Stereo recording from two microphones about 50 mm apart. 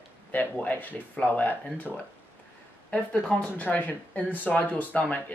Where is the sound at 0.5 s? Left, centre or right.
Left.